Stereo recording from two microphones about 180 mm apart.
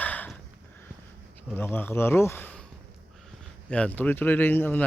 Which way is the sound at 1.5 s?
10° left (ahead or behind).